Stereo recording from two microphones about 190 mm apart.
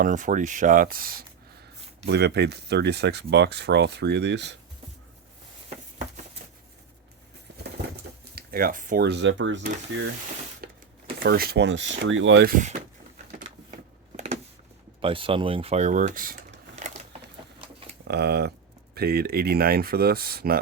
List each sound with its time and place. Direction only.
0.0 s speech: 40° right (ahead or behind)
2.0 s speech: 60° right (ahead or behind)
8.4 s speech: 50° right (ahead or behind)
9.0 s speech: 70° right (ahead or behind)
10.6 s a sound: 50° right (ahead or behind)
11.2 s speech: 55° right (ahead or behind); by 12.5 s 80° right
12.5 s speech: 40° right (ahead or behind)
15.0 s speech: 30° right (ahead or behind); by 16.4 s 45° right (ahead or behind)
16.8 s a sound: 40° right (ahead or behind)
18.1 s speech: 60° right (ahead or behind)